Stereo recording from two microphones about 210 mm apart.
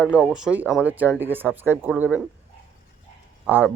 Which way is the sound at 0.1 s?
Centre (ahead or behind).